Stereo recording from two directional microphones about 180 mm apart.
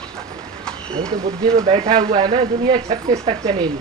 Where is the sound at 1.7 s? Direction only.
30° right (ahead or behind).